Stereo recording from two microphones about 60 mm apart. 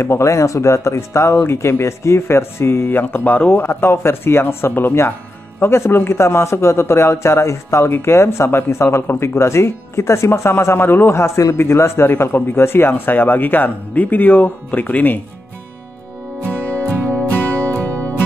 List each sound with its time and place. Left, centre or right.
0.0 s speech: left
17.7 s music: left